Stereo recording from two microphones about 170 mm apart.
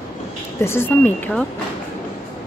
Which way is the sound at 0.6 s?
15° left (ahead or behind).